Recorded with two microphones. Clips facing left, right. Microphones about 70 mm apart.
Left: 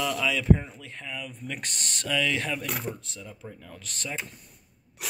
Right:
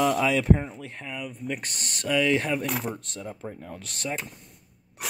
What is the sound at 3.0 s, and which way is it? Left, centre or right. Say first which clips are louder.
Speech: right 6 dB; right.